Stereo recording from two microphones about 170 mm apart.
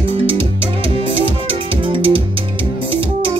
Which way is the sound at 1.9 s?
30° right (ahead or behind).